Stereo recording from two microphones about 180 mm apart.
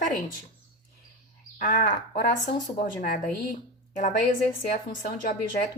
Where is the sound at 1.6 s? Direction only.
45° left (ahead or behind).